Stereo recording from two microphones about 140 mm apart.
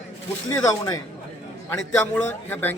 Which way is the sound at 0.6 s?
25° left (ahead or behind).